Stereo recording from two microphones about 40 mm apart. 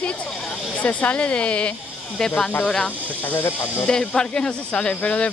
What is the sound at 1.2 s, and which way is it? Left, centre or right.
Speech, left.